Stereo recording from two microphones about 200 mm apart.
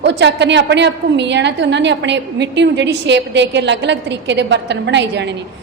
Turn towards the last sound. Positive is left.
turn(degrees=-60)  # may be behind; listen again after turning